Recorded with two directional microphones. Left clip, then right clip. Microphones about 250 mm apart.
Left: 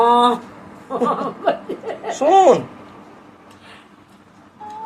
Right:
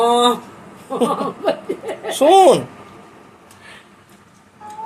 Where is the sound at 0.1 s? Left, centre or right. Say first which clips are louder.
Left 1 dB; centre.